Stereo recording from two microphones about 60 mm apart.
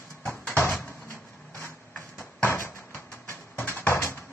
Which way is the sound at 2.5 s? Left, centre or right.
Left.